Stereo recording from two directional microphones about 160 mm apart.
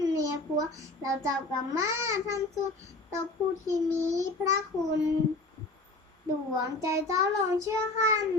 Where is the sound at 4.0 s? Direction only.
20° right (ahead or behind).